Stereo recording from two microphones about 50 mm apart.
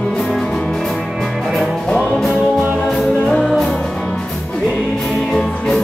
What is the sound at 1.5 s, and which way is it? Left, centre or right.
Music, centre.